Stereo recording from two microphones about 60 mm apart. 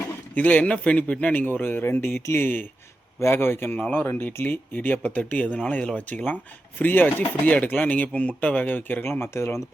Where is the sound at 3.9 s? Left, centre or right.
Left.